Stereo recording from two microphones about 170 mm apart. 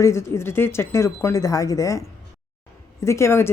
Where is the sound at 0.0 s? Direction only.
15° left (ahead or behind).